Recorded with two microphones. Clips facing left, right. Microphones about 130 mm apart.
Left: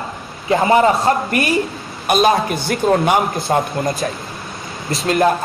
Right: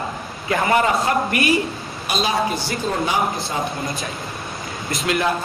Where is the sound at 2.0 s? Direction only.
55° left (ahead or behind).